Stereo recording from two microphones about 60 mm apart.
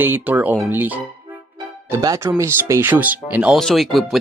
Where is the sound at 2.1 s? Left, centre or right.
Right.